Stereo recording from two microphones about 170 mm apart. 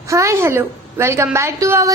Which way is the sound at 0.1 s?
15° right (ahead or behind).